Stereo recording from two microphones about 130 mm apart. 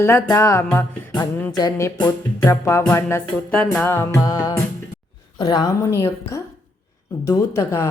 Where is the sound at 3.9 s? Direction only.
20° left (ahead or behind).